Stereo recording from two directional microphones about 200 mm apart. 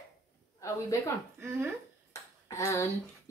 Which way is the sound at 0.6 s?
15° left (ahead or behind).